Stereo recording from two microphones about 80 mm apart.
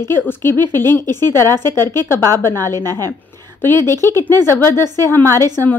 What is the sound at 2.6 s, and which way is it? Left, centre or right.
Speech, right.